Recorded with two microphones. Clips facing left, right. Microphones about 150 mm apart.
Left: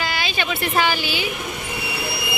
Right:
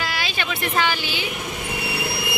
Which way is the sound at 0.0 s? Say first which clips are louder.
Left 2 dB; centre (ahead or behind).